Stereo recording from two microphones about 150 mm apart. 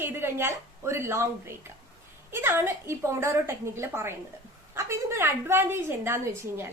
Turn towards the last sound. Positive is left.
turn(degrees=-20)  # may be behind; listen again after turning